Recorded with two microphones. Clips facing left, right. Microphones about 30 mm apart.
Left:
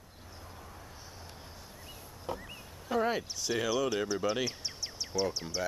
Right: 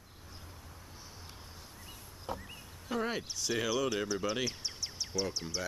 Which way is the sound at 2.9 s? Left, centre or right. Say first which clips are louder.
Left 4 dB; centre.